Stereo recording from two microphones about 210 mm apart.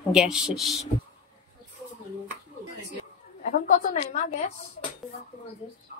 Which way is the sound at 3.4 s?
40° left (ahead or behind).